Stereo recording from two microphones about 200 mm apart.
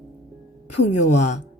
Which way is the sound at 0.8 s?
35° left (ahead or behind).